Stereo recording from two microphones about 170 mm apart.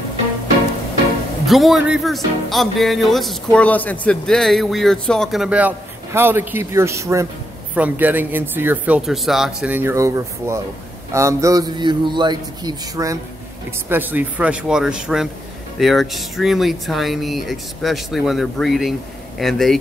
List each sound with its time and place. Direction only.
1.4 s a man's voice: centre (ahead or behind)